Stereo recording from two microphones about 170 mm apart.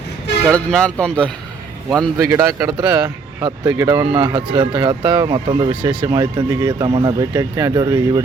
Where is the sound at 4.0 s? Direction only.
30° right (ahead or behind).